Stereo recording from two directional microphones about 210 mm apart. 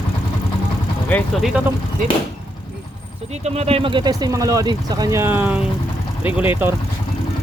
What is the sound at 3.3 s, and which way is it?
Speech, 30° right (ahead or behind).